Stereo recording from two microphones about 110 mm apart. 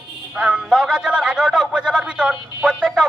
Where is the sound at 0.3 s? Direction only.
10° right (ahead or behind).